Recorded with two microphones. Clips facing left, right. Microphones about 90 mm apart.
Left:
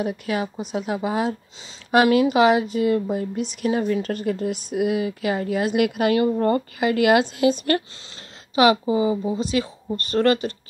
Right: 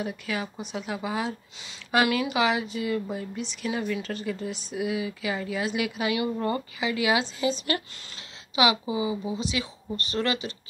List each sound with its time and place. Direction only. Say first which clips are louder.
0.0 s a woman's voice: left 6 dB; 45° left (ahead or behind)
6.1 s a woman's voice: left 8 dB; 40° left (ahead or behind)